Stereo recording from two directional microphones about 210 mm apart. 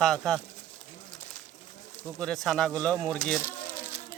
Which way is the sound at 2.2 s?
Centre (ahead or behind).